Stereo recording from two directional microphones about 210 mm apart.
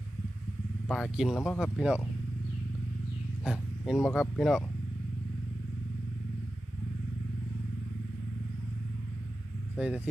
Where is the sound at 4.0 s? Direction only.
10° left (ahead or behind).